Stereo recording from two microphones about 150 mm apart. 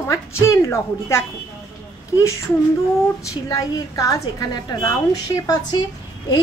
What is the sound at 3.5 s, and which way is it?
A woman's voice, 25° left (ahead or behind).